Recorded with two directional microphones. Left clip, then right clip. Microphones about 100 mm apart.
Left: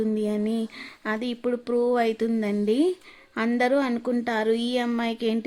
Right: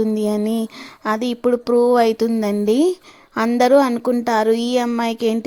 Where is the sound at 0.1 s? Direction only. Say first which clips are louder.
Right 6 dB; 35° right (ahead or behind).